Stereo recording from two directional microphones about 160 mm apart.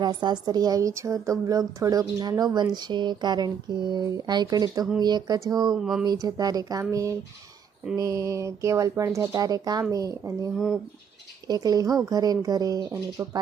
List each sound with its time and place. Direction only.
0.0 s a woman's voice: 25° right (ahead or behind)
5.8 s speech: 5° right (ahead or behind)
6.1 s a woman's voice: 25° right (ahead or behind)